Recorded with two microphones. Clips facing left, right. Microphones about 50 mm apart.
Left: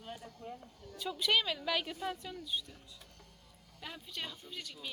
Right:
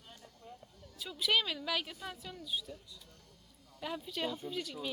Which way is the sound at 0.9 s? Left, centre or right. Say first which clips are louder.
Left 1 dB; centre.